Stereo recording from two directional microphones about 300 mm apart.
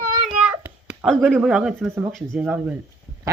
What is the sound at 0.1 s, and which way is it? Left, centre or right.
A child's voice, centre.